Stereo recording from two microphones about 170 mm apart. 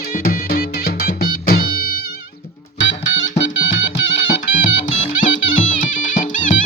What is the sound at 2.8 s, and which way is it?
Music, 90° left.